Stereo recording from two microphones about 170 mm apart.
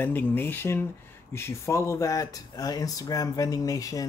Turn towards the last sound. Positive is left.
turn(degrees=20)  # may be behind; listen again after turning